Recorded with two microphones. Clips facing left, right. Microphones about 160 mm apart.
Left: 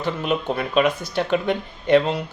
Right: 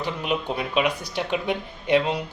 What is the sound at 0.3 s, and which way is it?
Speech, 10° right (ahead or behind).